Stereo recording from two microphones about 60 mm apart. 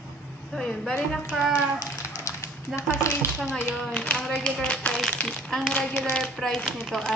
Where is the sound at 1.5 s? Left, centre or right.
Left.